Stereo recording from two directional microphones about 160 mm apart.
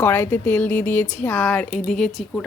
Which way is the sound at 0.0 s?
15° left (ahead or behind).